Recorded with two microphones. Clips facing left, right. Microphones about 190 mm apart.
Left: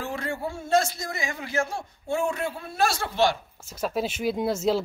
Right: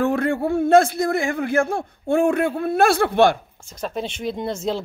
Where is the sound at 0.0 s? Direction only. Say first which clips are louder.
Right 11 dB; 55° right (ahead or behind).